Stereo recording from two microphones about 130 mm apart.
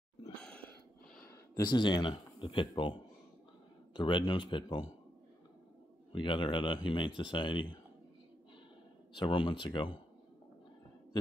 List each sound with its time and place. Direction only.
0.4 s a sound: 10° left (ahead or behind)
1.7 s speech: 35° left (ahead or behind)
6.1 s speech: 40° left (ahead or behind)
9.1 s speech: 40° left (ahead or behind)